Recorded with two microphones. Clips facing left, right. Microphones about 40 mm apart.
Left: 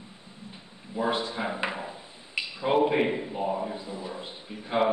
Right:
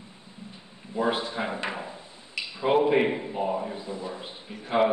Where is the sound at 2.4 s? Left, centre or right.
Left.